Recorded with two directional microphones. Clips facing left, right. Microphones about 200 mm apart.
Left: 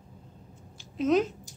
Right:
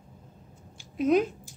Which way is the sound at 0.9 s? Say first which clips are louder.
Right 1 dB; 10° right (ahead or behind).